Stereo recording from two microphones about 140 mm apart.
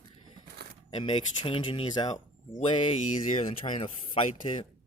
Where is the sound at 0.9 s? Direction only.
35° left (ahead or behind).